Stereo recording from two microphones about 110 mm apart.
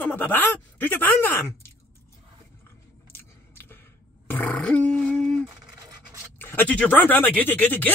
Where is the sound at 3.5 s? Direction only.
20° left (ahead or behind).